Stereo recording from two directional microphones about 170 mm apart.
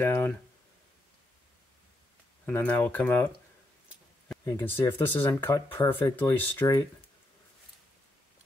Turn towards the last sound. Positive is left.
turn(degrees=15)  # may be behind; listen again after turning